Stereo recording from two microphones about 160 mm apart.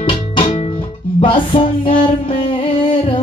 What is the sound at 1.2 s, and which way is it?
Music, 35° left (ahead or behind).